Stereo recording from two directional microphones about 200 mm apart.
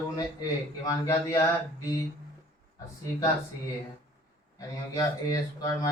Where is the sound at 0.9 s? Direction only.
15° left (ahead or behind).